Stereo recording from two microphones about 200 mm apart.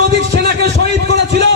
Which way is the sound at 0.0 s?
55° right (ahead or behind).